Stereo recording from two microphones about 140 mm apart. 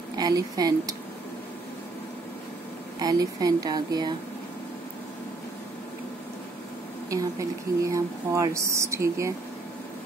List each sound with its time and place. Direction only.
0.2 s speech: 30° right (ahead or behind)
3.0 s speech: 25° right (ahead or behind)
7.1 s speech: 25° right (ahead or behind)